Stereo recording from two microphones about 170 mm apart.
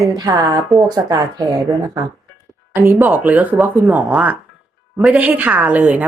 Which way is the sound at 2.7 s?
15° right (ahead or behind).